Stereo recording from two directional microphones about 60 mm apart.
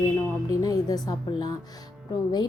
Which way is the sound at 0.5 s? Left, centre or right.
Left.